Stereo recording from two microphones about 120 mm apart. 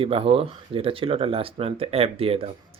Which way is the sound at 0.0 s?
50° right (ahead or behind).